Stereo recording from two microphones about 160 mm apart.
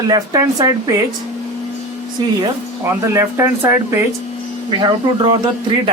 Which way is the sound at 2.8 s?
15° right (ahead or behind).